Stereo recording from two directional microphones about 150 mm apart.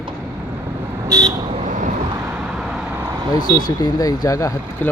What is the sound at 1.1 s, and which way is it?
Vehicle, 20° right (ahead or behind).